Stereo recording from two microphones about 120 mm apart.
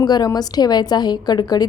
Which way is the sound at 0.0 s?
35° left (ahead or behind).